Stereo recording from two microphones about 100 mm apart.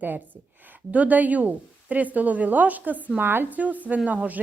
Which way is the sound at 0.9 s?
15° right (ahead or behind).